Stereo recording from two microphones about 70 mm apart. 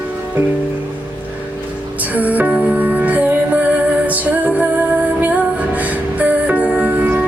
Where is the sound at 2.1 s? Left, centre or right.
Right.